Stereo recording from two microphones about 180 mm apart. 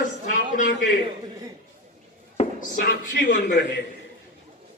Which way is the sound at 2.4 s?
40° left (ahead or behind).